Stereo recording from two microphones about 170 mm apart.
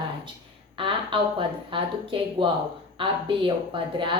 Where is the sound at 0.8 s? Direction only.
30° right (ahead or behind).